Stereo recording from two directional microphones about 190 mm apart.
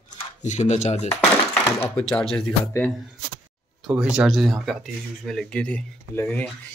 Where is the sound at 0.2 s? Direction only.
40° left (ahead or behind).